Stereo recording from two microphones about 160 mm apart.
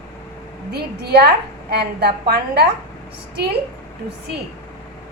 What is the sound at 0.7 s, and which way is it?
A woman's voice, 90° right.